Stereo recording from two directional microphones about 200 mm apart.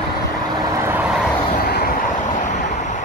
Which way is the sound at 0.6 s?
15° right (ahead or behind).